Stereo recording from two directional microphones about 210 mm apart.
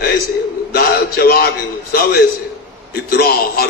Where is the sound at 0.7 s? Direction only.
45° left (ahead or behind).